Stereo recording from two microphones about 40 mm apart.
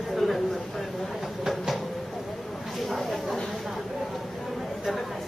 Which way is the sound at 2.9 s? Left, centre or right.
Centre.